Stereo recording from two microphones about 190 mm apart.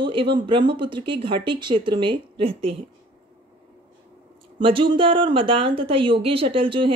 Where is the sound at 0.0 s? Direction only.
25° right (ahead or behind).